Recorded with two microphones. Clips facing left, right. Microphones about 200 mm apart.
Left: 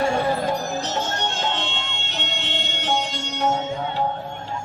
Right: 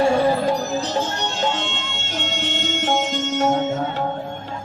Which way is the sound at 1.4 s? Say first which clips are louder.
Right 3 dB; 45° right (ahead or behind).